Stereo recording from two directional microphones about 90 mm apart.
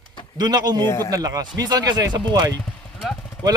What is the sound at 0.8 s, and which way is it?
Speech, 30° left (ahead or behind).